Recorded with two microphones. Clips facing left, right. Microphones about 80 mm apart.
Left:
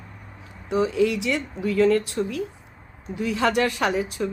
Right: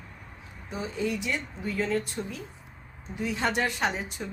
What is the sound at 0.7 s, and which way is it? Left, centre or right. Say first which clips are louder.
Speech: left 10 dB; left.